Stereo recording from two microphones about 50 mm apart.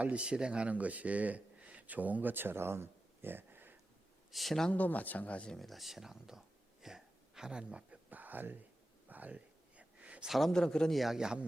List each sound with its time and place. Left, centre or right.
0.0 s speech: right
4.3 s speech: centre
4.7 s speech: left
5.5 s speech: centre
6.8 s a sound: centre
8.1 s a sound: right
9.0 s whispering: right
10.2 s speech: centre
10.5 s speech: centre
10.9 s speech: centre
11.2 s speech: centre